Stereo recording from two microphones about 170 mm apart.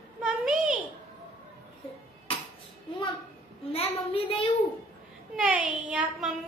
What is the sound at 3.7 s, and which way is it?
Child singing, 35° left (ahead or behind).